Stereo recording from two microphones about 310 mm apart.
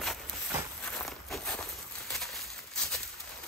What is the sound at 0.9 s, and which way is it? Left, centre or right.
Walk, centre.